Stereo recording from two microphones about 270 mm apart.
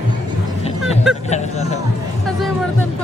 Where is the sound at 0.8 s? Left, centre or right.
Centre.